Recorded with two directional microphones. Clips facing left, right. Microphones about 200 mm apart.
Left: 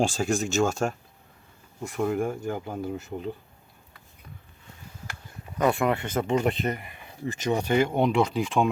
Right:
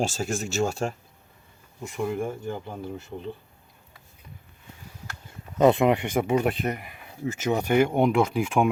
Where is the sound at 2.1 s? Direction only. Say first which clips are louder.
Left 2 dB; 10° left (ahead or behind).